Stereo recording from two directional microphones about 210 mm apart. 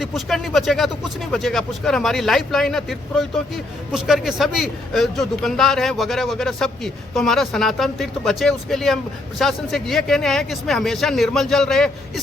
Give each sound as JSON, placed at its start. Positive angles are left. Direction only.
{"t": 0.0, "sound": "a man's voice", "side_deg": 0}